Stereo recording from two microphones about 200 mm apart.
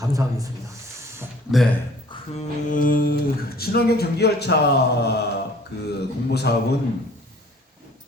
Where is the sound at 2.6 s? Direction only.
45° left (ahead or behind).